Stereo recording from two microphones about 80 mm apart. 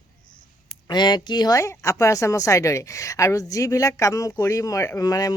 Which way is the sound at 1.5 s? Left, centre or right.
Left.